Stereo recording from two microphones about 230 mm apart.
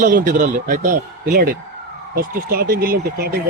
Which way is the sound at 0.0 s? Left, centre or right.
Right.